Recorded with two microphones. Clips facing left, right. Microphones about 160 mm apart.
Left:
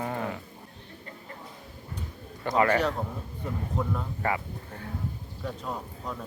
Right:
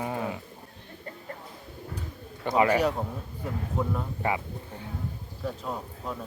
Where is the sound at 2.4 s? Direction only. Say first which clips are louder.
Right 1 dB; 15° right (ahead or behind).